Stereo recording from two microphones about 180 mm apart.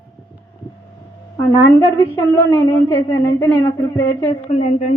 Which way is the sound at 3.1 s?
20° left (ahead or behind).